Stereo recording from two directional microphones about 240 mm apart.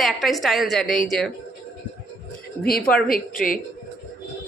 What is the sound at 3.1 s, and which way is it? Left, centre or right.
Speech, left.